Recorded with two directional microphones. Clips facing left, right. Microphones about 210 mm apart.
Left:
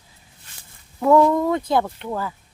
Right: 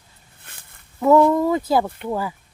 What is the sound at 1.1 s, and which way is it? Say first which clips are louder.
Speech: right 1 dB; 10° right (ahead or behind).